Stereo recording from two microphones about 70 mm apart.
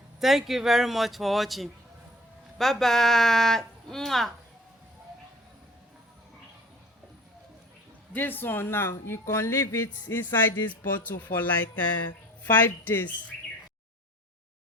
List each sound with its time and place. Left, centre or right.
0.2 s speech: centre
8.1 s speech: left
10.6 s music: left